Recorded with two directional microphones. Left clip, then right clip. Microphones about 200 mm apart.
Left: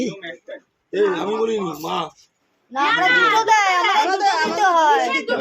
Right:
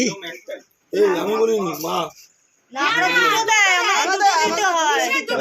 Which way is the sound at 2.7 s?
45° left (ahead or behind).